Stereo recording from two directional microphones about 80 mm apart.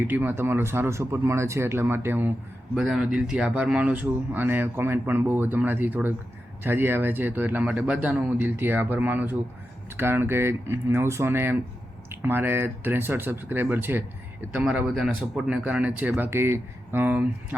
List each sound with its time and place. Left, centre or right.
0.1 s speech: right
2.7 s speech: centre; by 14.0 s right
14.5 s speech: centre
16.1 s speech: right